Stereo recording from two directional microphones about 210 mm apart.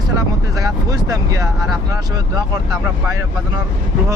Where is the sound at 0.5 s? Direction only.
15° right (ahead or behind).